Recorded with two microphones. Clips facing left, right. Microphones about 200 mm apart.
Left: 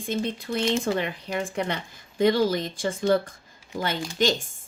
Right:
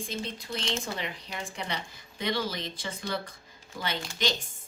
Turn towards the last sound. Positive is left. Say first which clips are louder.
# left 7 dB
turn(degrees=45)  # may be behind; listen again after turning